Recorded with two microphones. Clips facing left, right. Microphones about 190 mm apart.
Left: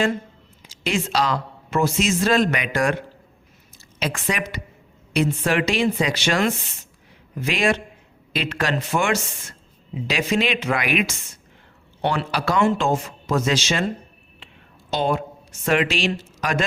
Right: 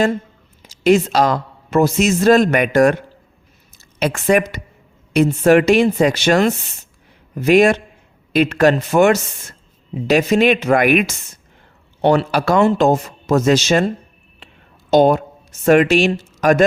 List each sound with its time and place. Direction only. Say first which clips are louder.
0.9 s a man's voice: right 9 dB; 45° right (ahead or behind)
4.0 s a man's voice: right 10 dB; 50° right (ahead or behind)
14.3 s a sound: right 3 dB; 45° right (ahead or behind)
15.6 s a man's voice: right 9 dB; 45° right (ahead or behind)